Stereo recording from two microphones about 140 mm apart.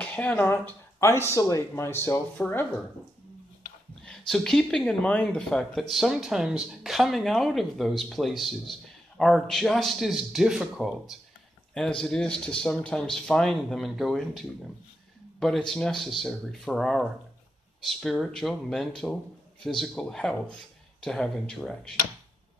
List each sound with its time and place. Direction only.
0.0 s speech: 10° left (ahead or behind)
2.3 s speech: 10° left (ahead or behind)
4.3 s speech: 5° left (ahead or behind)